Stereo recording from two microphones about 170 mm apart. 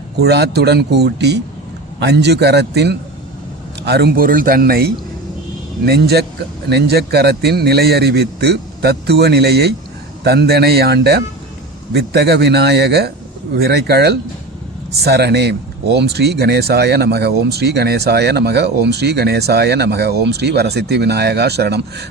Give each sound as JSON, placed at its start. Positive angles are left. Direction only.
{"t": 0.2, "sound": "a man's voice", "side_deg": -75}